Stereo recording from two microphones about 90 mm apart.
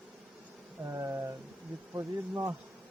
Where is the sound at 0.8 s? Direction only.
30° right (ahead or behind).